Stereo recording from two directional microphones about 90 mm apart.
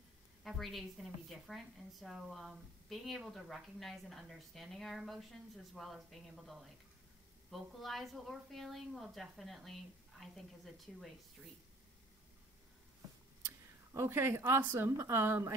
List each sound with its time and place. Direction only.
0.4 s a woman's voice: centre (ahead or behind)
13.5 s a sound: 30° right (ahead or behind)
14.6 s speech: 25° right (ahead or behind)